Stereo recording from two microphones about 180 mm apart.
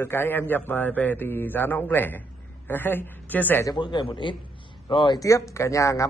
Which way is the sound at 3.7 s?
25° left (ahead or behind).